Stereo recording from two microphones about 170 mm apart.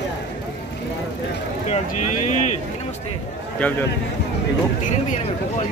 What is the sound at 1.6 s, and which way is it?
Speech, 45° left (ahead or behind).